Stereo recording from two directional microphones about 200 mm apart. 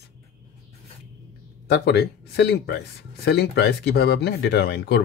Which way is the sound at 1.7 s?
55° left (ahead or behind).